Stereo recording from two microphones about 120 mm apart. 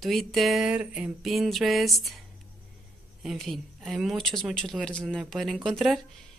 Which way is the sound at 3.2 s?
Centre (ahead or behind).